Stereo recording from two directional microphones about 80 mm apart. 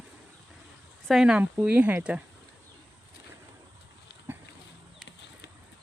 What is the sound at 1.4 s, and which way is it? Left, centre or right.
Speech, right.